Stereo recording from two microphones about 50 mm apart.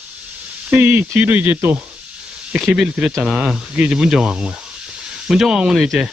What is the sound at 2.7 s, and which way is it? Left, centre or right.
Speech, centre.